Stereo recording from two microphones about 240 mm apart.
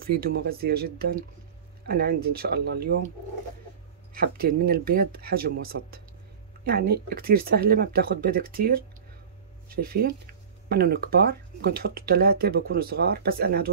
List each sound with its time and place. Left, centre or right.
0.0 s speech: right
4.1 s speech: right